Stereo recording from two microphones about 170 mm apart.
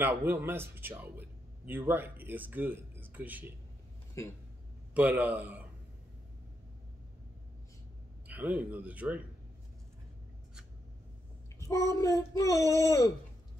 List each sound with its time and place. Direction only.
0.0 s speech: 10° right (ahead or behind)
4.9 s speech: 10° right (ahead or behind)
8.3 s speech: 10° right (ahead or behind)
11.6 s child singing: 20° left (ahead or behind)
12.5 s speech: 20° right (ahead or behind)
12.8 s child singing: 20° left (ahead or behind)